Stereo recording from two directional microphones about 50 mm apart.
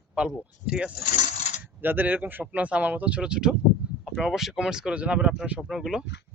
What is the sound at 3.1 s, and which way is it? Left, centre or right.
Speech, centre.